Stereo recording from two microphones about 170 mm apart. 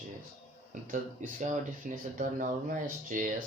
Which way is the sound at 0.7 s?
50° right (ahead or behind).